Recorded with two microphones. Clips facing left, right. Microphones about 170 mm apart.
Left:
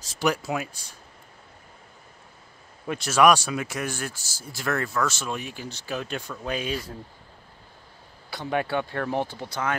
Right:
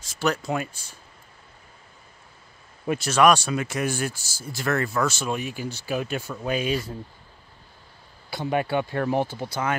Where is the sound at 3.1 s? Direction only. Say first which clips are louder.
Even; 10° left (ahead or behind).